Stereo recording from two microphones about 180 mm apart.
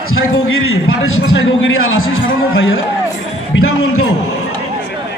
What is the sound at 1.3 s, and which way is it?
Speech, 90° left.